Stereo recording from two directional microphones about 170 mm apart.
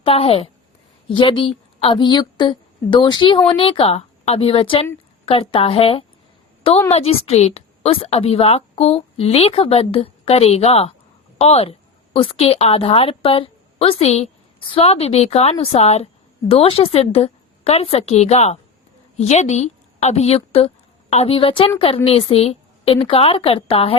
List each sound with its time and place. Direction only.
0.0 s a woman's voice: 35° left (ahead or behind)